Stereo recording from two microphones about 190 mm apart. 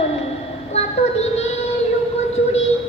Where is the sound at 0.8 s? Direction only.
35° left (ahead or behind).